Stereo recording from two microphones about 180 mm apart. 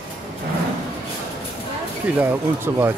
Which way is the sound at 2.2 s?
10° right (ahead or behind).